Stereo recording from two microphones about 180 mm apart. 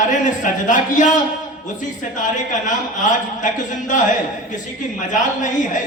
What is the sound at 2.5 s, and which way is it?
A man's voice, 45° left (ahead or behind).